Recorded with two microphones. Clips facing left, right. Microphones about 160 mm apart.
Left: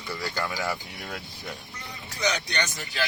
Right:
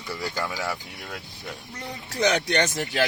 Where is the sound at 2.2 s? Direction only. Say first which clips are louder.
Right 6 dB; 60° right (ahead or behind).